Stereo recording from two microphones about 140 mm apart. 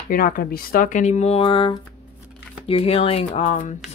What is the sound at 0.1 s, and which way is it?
Speech, 90° left.